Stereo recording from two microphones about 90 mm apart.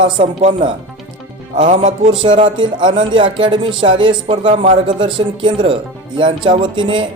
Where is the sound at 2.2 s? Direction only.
65° right (ahead or behind).